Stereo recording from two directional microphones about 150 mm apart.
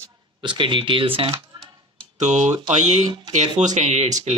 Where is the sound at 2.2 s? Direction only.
50° right (ahead or behind).